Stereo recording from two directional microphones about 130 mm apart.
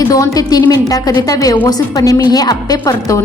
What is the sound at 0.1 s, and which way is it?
A woman's voice, 30° left (ahead or behind).